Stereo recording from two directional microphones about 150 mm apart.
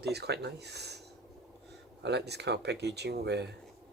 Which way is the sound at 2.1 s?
90° right.